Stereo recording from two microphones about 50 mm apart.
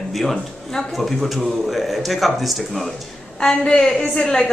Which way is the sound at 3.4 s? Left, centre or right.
Centre.